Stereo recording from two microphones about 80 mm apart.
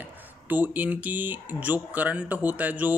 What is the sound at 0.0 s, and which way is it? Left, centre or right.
Speech, right.